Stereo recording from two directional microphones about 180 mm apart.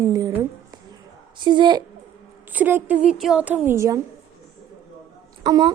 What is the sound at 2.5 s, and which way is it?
Speech, 10° right (ahead or behind).